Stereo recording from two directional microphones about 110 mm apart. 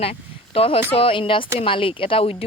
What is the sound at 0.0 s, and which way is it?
Speech, 60° left (ahead or behind).